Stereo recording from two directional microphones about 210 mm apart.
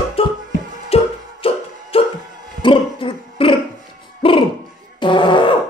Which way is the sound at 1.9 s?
25° left (ahead or behind).